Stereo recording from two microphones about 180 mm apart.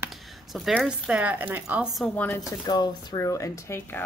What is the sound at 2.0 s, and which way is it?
Speech, 10° left (ahead or behind).